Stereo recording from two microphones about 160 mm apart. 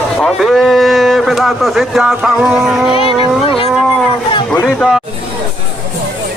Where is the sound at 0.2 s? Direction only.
Centre (ahead or behind).